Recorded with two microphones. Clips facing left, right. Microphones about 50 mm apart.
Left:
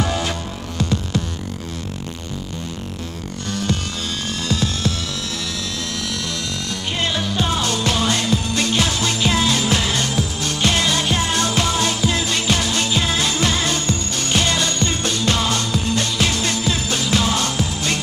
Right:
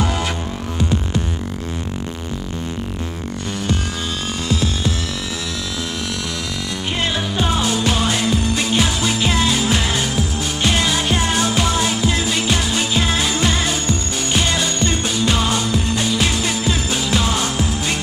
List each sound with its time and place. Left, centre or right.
0.7 s music: right
4.5 s music: centre
7.0 s music: centre